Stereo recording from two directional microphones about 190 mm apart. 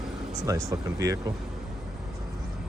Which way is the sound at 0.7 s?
20° right (ahead or behind).